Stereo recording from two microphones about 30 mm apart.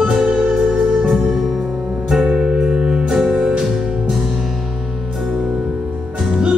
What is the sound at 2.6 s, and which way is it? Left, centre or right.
Music, right.